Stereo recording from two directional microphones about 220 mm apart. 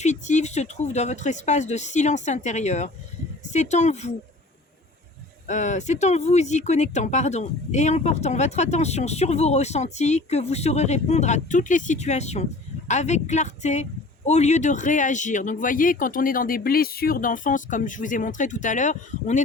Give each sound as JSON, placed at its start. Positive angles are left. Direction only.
{"t": 0.0, "sound": "speech", "side_deg": 35}
{"t": 5.5, "sound": "speech", "side_deg": 35}